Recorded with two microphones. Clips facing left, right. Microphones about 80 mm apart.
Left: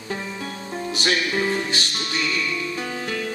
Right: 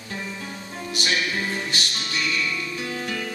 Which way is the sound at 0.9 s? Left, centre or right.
Left.